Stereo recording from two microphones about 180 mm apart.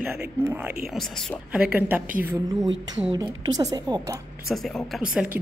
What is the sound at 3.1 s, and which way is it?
Speech, 25° right (ahead or behind).